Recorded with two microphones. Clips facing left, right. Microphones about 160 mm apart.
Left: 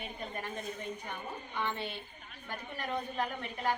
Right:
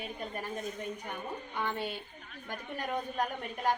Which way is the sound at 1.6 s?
10° right (ahead or behind).